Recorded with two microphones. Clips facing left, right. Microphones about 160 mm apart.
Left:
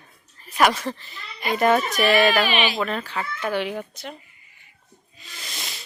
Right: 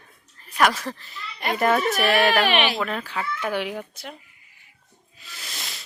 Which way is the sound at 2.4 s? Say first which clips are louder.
Right 1 dB; 65° right (ahead or behind).